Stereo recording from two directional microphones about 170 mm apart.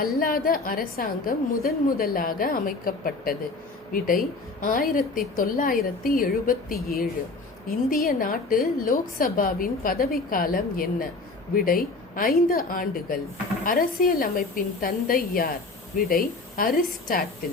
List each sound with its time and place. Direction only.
0.0 s a woman's voice: 60° left (ahead or behind)
7.9 s a woman's voice: 55° left (ahead or behind)